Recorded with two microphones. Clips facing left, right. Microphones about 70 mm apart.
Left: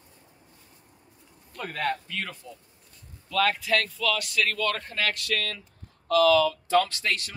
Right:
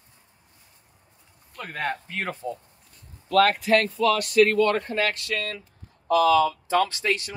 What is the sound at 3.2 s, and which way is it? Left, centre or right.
Speech, right.